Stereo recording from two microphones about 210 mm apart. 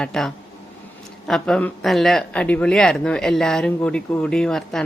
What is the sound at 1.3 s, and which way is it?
Speech, 5° left (ahead or behind).